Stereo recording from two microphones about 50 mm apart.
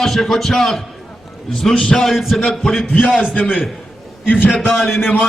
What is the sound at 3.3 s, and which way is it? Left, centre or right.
A man's voice, left.